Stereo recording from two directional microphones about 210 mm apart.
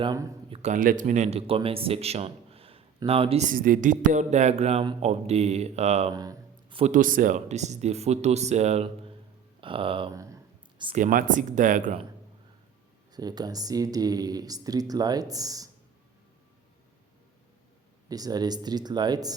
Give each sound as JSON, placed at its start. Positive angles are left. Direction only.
{"t": 0.0, "sound": "speech", "side_deg": -15}
{"t": 0.5, "sound": "speech", "side_deg": -35}
{"t": 6.1, "sound": "a sound", "side_deg": -20}
{"t": 6.9, "sound": "speech", "side_deg": -40}
{"t": 9.6, "sound": "a sound", "side_deg": -25}
{"t": 10.9, "sound": "speech", "side_deg": -40}
{"t": 13.1, "sound": "speech", "side_deg": -20}
{"t": 18.1, "sound": "speech", "side_deg": -20}